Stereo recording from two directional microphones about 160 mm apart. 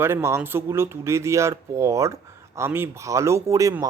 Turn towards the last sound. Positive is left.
turn(degrees=-20)  # may be behind; listen again after turning